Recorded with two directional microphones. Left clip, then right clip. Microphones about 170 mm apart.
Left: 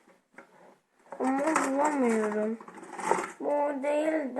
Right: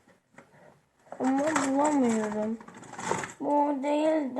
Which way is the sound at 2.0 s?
Centre (ahead or behind).